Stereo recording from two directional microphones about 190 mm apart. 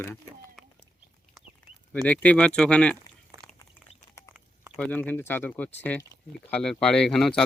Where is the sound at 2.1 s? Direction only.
5° left (ahead or behind).